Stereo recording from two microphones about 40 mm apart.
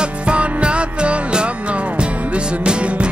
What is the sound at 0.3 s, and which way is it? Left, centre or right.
Music, right.